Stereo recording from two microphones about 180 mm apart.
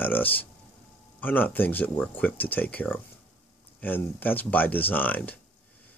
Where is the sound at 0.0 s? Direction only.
10° left (ahead or behind).